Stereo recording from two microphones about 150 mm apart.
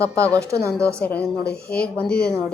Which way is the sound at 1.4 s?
90° left.